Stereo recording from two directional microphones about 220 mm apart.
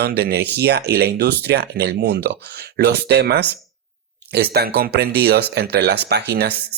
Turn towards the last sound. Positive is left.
turn(degrees=-50)  # may be behind; listen again after turning